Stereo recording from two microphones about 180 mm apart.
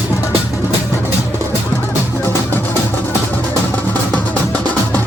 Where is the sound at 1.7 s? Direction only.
15° left (ahead or behind).